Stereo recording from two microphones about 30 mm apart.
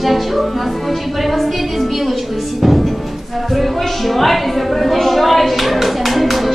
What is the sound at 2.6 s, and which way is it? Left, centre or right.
Music, centre.